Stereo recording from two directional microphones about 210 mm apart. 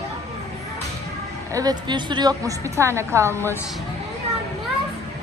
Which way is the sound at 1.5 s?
20° right (ahead or behind).